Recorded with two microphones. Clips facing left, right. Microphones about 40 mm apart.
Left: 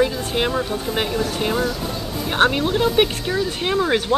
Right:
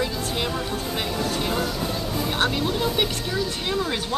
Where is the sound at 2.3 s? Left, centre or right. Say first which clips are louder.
Left 8 dB; left.